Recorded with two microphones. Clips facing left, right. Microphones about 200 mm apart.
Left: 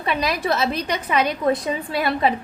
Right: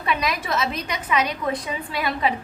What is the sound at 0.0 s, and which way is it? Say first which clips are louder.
A woman's voice: left 2 dB; 35° left (ahead or behind).